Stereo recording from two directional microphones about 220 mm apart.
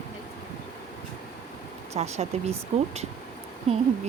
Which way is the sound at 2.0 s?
30° right (ahead or behind).